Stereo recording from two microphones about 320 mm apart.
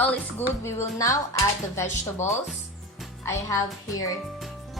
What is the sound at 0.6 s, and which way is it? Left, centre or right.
Speech, centre.